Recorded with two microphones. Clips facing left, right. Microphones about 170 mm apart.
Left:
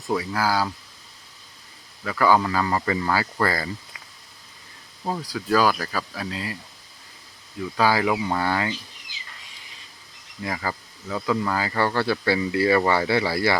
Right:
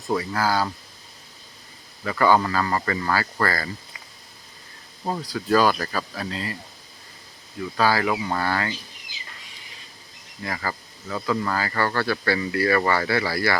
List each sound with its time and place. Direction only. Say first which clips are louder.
0.2 s speech: even; 10° left (ahead or behind)
2.0 s speech: even; 5° left (ahead or behind)
5.0 s speech: right 1 dB; centre (ahead or behind)
7.8 s speech: left 1 dB; 15° left (ahead or behind)
10.4 s speech: left 1 dB; 15° left (ahead or behind)